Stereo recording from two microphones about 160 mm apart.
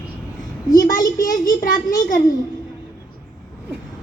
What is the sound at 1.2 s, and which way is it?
Speech, 55° left (ahead or behind).